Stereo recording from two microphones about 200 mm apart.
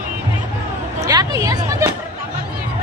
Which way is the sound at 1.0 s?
15° right (ahead or behind).